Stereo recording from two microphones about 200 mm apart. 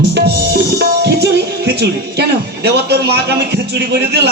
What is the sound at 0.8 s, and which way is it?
Music, 55° right (ahead or behind).